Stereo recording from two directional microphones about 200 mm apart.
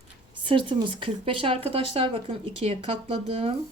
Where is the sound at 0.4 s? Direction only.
25° right (ahead or behind).